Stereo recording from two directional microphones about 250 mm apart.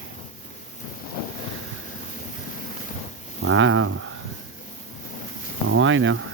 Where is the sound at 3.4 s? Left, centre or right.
Right.